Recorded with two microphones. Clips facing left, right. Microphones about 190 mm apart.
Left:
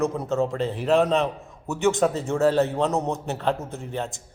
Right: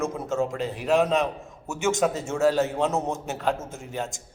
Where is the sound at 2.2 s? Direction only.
Centre (ahead or behind).